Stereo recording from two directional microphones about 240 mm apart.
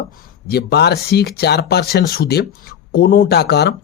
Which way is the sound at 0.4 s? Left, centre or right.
Left.